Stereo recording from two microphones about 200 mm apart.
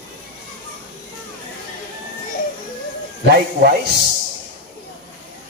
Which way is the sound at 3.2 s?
55° right (ahead or behind).